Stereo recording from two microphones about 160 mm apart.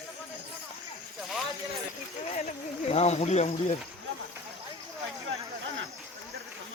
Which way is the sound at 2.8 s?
40° left (ahead or behind).